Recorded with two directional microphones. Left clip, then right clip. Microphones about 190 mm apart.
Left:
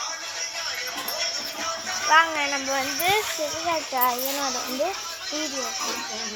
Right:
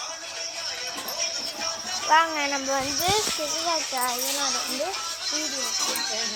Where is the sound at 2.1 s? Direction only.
25° right (ahead or behind).